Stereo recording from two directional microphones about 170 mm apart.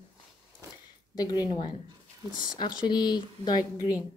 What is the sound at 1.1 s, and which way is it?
Speech, 25° left (ahead or behind).